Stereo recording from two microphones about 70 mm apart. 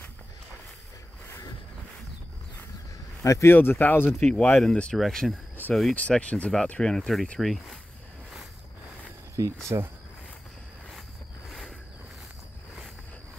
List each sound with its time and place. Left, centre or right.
3.3 s speech: left
3.5 s speech: left
4.1 s speech: centre
5.9 s speech: centre
9.7 s speech: right